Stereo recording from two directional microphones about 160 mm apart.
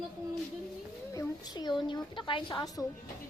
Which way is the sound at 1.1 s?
20° left (ahead or behind).